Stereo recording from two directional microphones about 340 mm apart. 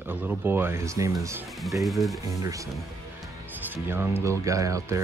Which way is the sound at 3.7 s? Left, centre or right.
Centre.